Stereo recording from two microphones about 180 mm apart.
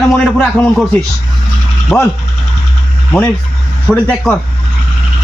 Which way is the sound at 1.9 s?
5° left (ahead or behind).